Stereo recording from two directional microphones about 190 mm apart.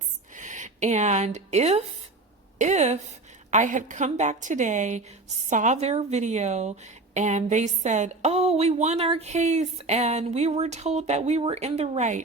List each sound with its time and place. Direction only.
0.3 s a woman's voice: 40° right (ahead or behind)